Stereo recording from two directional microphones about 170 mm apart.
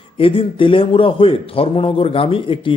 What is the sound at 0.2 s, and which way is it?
A man's voice, 30° left (ahead or behind).